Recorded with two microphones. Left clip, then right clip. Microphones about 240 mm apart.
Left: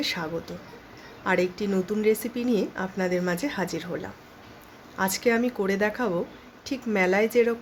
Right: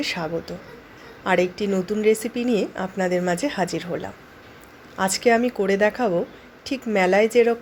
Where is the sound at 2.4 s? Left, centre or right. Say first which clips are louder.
Right 4 dB; left.